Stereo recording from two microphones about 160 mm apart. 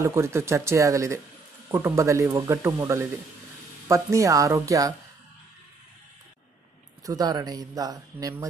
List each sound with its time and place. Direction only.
0.0 s speech: 15° right (ahead or behind)
7.1 s speech: 25° right (ahead or behind)